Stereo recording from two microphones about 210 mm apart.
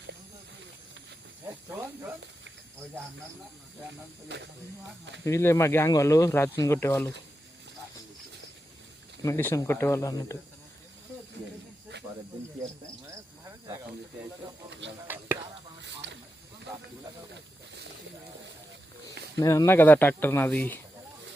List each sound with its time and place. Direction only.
1.7 s speech: 10° right (ahead or behind)
4.3 s speech: 55° right (ahead or behind)
5.2 s speech: 15° left (ahead or behind)
9.2 s speech: 10° left (ahead or behind)
14.7 s speech: 60° right (ahead or behind)
15.0 s speech: 10° right (ahead or behind)
16.0 s snake: 55° right (ahead or behind)
19.4 s speech: 15° left (ahead or behind)